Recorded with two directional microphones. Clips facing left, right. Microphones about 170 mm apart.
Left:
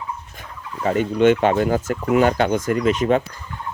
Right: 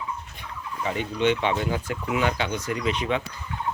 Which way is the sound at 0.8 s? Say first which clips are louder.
Left 8 dB; 50° left (ahead or behind).